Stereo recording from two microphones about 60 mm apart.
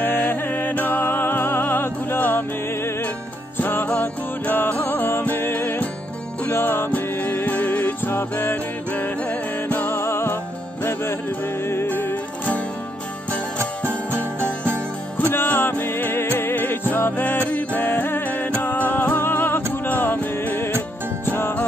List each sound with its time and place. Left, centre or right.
0.0 s music: left
3.5 s music: left
6.9 s music: left
13.6 s music: right
15.1 s music: left